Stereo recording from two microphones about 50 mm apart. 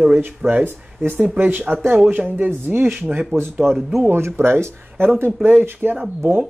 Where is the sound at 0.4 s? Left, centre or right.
Right.